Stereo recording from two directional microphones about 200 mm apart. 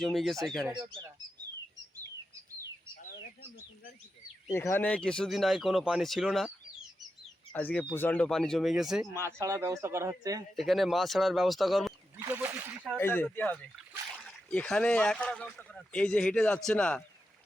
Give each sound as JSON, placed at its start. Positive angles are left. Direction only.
{"t": 0.0, "sound": "speech", "side_deg": 0}
{"t": 4.5, "sound": "speech", "side_deg": 10}
{"t": 7.5, "sound": "speech", "side_deg": 10}
{"t": 9.4, "sound": "speech", "side_deg": -15}
{"t": 10.5, "sound": "speech", "side_deg": 0}
{"t": 12.2, "sound": "a sound", "side_deg": -10}
{"t": 13.0, "sound": "speech", "side_deg": 10}